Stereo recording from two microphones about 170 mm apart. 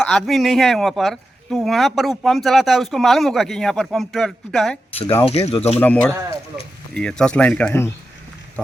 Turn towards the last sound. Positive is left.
turn(degrees=10)  # may be behind; listen again after turning